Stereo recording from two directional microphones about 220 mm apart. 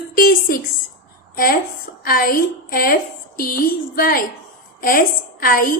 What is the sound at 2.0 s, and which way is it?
A woman's voice, 40° left (ahead or behind).